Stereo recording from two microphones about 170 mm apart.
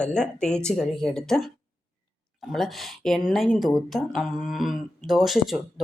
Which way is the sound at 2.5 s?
Centre (ahead or behind).